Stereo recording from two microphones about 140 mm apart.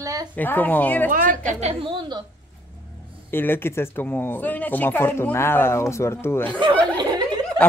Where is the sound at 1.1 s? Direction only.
75° right (ahead or behind); by 2.2 s 35° right (ahead or behind).